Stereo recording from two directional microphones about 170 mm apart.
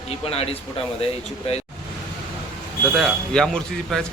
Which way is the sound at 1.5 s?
35° left (ahead or behind).